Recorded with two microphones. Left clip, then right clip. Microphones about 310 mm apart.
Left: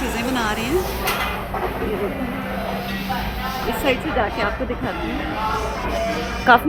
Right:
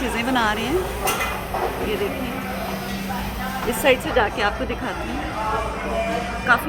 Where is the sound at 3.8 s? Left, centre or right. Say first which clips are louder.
Right 3 dB; centre.